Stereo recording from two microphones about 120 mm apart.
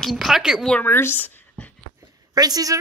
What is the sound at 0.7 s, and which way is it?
Speech, 15° left (ahead or behind).